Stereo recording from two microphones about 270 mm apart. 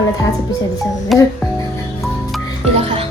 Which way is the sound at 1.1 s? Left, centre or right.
Centre.